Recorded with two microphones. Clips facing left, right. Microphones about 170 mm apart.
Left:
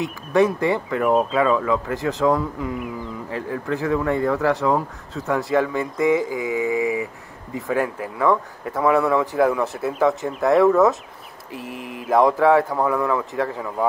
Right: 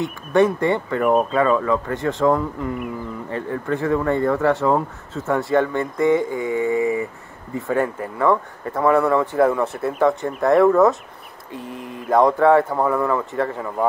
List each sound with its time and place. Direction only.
0.0 s speech: centre (ahead or behind)
11.5 s speech: 90° left
12.1 s speech: centre (ahead or behind)